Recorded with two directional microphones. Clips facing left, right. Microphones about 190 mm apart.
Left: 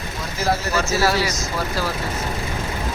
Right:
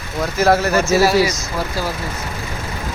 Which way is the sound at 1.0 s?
15° right (ahead or behind).